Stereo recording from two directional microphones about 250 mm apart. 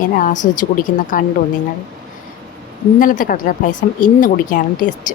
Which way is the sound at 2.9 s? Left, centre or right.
Left.